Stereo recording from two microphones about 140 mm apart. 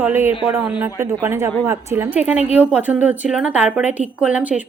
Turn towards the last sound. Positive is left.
turn(degrees=-10)  # may be behind; listen again after turning